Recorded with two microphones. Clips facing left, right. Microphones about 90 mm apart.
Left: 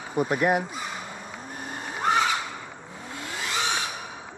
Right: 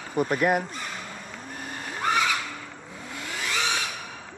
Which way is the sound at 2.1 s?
25° left (ahead or behind).